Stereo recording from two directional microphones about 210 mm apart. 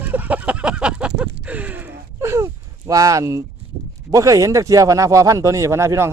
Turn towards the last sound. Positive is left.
turn(degrees=-10)  # may be behind; listen again after turning